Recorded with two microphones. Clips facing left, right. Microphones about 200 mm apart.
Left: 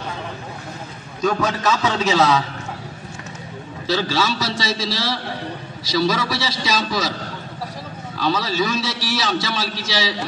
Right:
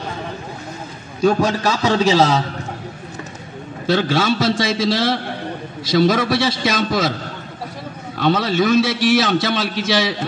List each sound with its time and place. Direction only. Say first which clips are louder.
1.7 s a man's voice: right 3 dB; 35° right (ahead or behind)
3.8 s a man's voice: right 4 dB; 55° right (ahead or behind)
8.2 s a man's voice: right 4 dB; 55° right (ahead or behind)